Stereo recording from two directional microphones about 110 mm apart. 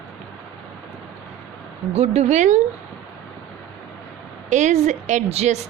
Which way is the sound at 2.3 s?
90° right.